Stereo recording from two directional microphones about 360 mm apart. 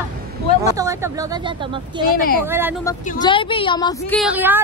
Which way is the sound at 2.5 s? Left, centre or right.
Centre.